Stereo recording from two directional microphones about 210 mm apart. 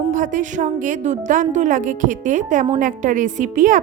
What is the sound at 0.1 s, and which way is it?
A woman's voice, 40° right (ahead or behind).